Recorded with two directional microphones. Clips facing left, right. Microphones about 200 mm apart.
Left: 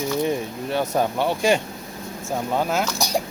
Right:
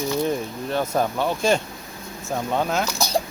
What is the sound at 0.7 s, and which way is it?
Speech, 15° left (ahead or behind).